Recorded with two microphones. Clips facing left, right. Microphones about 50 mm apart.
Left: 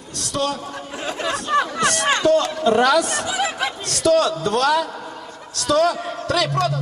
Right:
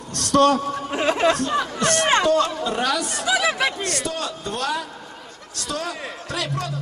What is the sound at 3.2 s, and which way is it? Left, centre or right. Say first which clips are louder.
Speech: right 2 dB; right.